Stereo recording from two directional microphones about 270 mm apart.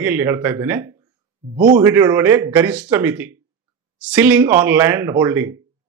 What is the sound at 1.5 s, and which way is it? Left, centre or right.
Speech, right.